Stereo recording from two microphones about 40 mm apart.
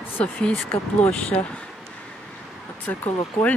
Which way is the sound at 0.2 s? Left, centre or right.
Left.